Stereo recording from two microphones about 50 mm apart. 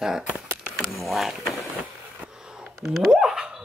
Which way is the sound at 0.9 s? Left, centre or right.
Centre.